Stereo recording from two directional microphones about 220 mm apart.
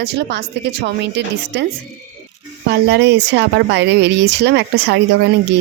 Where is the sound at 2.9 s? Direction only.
50° right (ahead or behind).